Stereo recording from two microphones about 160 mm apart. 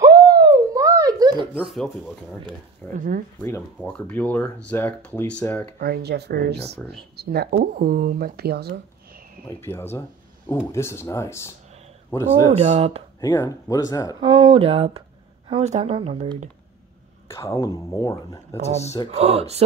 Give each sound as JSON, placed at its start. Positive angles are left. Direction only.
{"t": 0.0, "sound": "a sound", "side_deg": -25}
{"t": 1.5, "sound": "speech", "side_deg": 0}
{"t": 3.0, "sound": "speech", "side_deg": -60}
{"t": 3.4, "sound": "speech", "side_deg": 15}
{"t": 5.8, "sound": "speech", "side_deg": -75}
{"t": 9.5, "sound": "speech", "side_deg": 15}
{"t": 12.5, "sound": "speech", "side_deg": -40}
{"t": 13.2, "sound": "speech", "side_deg": 20}
{"t": 14.2, "sound": "speech", "side_deg": -30}
{"t": 17.3, "sound": "speech", "side_deg": 20}
{"t": 19.0, "sound": "speech", "side_deg": -40}